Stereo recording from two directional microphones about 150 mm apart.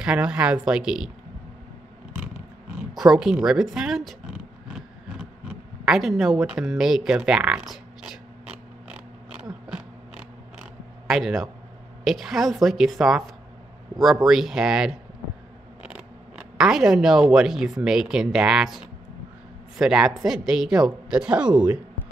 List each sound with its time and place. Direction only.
0.0 s speech: 5° right (ahead or behind)
2.1 s roaring cats: 10° right (ahead or behind)
2.9 s a sound: centre (ahead or behind)
7.2 s speech: 5° right (ahead or behind)
8.8 s mechanisms: 5° right (ahead or behind)
10.6 s zipper: 5° right (ahead or behind)
12.0 s speech: centre (ahead or behind)
14.2 s speech: centre (ahead or behind)
16.3 s speech: 5° right (ahead or behind)